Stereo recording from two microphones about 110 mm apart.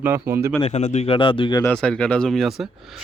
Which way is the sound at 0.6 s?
90° left.